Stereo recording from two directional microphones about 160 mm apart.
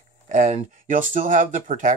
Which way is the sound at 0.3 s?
50° right (ahead or behind).